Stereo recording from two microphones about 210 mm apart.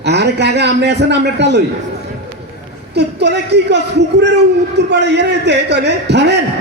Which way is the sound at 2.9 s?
55° right (ahead or behind).